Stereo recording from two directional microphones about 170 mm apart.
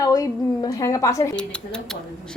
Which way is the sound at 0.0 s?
20° left (ahead or behind).